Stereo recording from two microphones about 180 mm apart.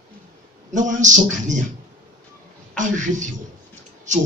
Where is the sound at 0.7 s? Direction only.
45° right (ahead or behind).